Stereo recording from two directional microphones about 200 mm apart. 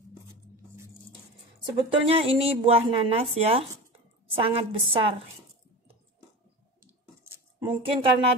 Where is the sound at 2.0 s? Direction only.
30° right (ahead or behind).